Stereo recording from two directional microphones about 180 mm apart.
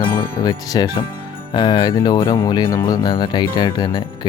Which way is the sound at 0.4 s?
20° left (ahead or behind).